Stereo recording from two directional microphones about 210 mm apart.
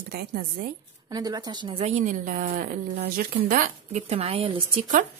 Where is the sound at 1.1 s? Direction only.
20° right (ahead or behind).